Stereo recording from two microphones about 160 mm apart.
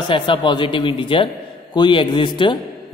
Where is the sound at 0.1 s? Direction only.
30° left (ahead or behind).